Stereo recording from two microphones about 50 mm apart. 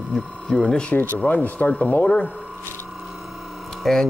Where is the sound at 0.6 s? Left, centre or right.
Left.